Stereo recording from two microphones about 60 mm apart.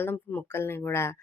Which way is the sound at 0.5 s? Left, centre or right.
Left.